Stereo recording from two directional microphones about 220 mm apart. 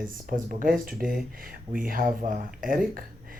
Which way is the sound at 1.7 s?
40° right (ahead or behind).